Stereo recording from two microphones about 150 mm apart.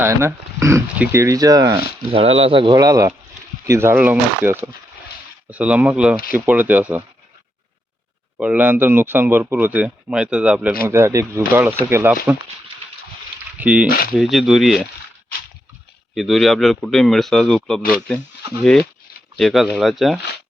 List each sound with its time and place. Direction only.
0.0 s speech: 15° right (ahead or behind)
2.1 s speech: 40° right (ahead or behind)
2.7 s speech: 25° right (ahead or behind)
8.4 s speech: 10° right (ahead or behind)
10.8 s speech: 20° right (ahead or behind)
13.6 s speech: 10° right (ahead or behind)
16.1 s speech: centre (ahead or behind)